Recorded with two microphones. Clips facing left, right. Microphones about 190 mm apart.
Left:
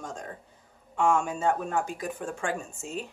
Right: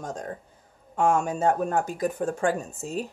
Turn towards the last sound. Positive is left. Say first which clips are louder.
# right 4 dB
turn(degrees=-35)  # may be behind; listen again after turning